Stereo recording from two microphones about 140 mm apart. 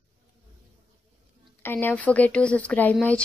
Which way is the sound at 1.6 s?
15° left (ahead or behind).